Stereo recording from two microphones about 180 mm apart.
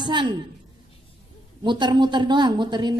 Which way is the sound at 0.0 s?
25° right (ahead or behind).